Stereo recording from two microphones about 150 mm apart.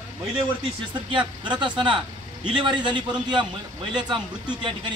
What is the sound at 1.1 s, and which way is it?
A man's voice, 30° right (ahead or behind).